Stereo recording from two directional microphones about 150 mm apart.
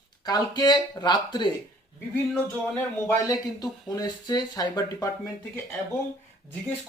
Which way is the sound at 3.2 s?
25° left (ahead or behind).